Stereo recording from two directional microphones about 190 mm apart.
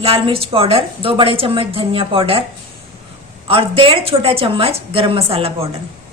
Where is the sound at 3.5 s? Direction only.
30° right (ahead or behind).